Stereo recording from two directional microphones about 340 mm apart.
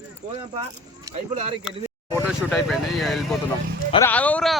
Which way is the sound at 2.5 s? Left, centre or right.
Centre.